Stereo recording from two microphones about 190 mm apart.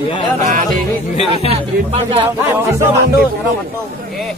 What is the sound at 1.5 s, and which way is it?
Speech, 30° right (ahead or behind).